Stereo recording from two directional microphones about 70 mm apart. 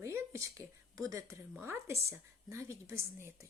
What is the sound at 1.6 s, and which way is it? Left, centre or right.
Speech, right.